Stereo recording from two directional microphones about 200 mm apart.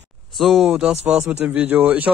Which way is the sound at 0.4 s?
Centre (ahead or behind).